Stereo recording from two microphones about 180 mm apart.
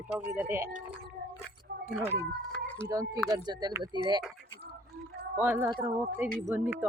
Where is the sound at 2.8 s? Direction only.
20° right (ahead or behind).